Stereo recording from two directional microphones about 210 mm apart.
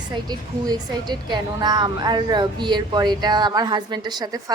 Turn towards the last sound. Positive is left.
turn(degrees=-20)  # may be behind; listen again after turning